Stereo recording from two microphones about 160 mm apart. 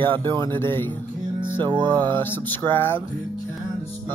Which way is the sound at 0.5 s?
15° left (ahead or behind).